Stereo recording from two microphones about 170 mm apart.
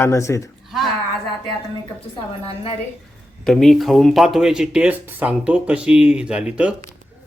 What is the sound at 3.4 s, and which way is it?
Speech, 5° left (ahead or behind).